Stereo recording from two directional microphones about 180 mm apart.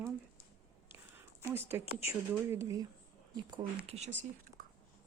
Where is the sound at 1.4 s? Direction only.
10° right (ahead or behind).